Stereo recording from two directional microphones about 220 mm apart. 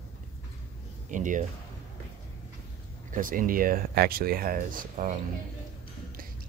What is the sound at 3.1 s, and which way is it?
Speech, 40° right (ahead or behind).